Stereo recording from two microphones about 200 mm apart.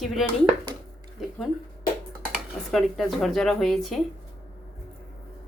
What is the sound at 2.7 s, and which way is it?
Speech, centre (ahead or behind).